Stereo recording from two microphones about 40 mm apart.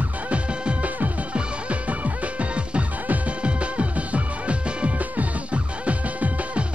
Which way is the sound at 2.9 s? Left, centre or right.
Right.